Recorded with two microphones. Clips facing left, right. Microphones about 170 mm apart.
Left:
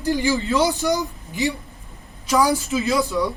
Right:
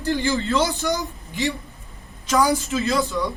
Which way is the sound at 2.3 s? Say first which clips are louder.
Left 1 dB; 5° left (ahead or behind).